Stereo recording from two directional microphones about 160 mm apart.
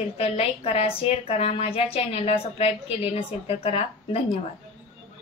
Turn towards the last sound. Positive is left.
turn(degrees=40)  # may be behind; listen again after turning